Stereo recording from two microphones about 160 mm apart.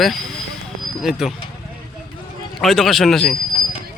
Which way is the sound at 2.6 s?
Centre (ahead or behind).